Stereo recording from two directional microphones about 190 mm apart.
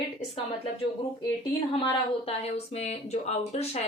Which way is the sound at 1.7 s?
30° left (ahead or behind).